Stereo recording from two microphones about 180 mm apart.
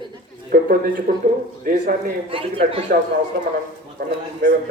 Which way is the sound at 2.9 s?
60° right (ahead or behind).